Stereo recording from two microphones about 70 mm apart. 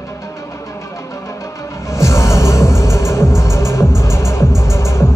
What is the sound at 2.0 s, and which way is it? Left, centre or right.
Music, left.